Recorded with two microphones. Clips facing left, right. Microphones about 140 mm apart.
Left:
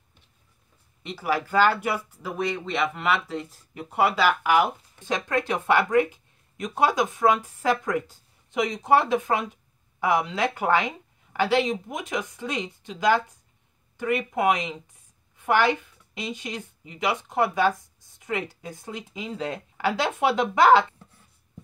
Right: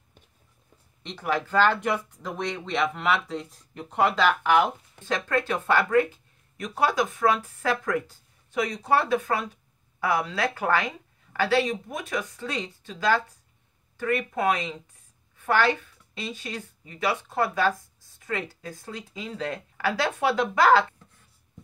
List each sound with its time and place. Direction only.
1.0 s speech: 5° left (ahead or behind)